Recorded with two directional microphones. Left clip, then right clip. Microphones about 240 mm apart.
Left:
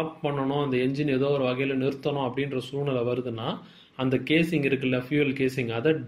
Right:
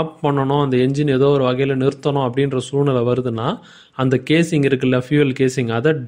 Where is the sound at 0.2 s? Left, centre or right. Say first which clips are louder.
Right 11 dB; right.